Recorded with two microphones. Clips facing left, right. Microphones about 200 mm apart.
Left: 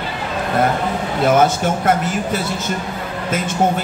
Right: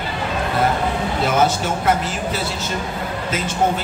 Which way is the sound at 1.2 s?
50° left (ahead or behind).